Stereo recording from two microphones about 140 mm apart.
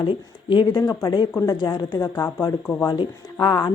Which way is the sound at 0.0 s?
35° left (ahead or behind).